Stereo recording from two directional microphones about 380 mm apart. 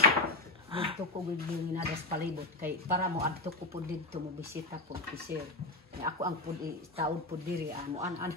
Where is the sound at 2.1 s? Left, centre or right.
Right.